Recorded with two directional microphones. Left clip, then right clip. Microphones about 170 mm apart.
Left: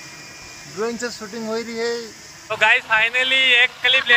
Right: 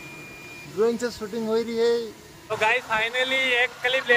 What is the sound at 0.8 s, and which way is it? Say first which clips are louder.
Speech: right 2 dB; 10° left (ahead or behind).